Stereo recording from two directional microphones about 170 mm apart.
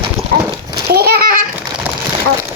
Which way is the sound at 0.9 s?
65° right (ahead or behind).